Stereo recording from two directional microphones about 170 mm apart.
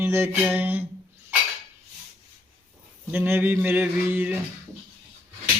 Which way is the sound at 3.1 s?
15° right (ahead or behind).